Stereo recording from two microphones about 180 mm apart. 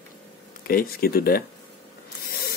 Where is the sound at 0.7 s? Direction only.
55° left (ahead or behind).